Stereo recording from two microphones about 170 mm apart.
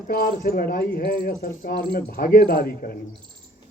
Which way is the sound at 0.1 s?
60° left (ahead or behind).